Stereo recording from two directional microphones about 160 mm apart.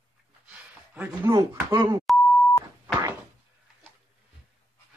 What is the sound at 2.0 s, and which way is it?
Beep, 10° left (ahead or behind).